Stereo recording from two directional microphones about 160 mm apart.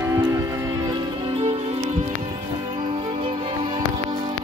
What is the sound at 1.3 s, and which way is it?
Music, 35° right (ahead or behind).